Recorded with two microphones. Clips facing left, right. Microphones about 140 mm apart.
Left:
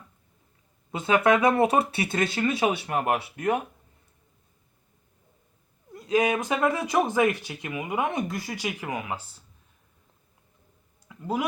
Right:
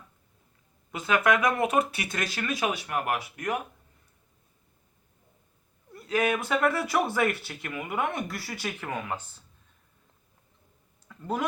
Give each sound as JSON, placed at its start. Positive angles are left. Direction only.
{"t": 0.9, "sound": "speech", "side_deg": 25}
{"t": 5.9, "sound": "speech", "side_deg": 20}
{"t": 11.1, "sound": "speech", "side_deg": 10}